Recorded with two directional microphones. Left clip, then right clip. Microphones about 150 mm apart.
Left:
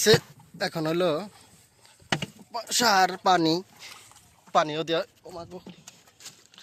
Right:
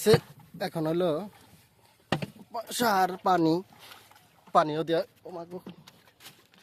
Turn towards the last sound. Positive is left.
turn(degrees=-40)  # may be behind; listen again after turning